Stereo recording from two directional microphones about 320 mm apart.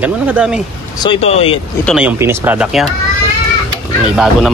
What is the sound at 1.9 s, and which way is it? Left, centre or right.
A man's voice, centre.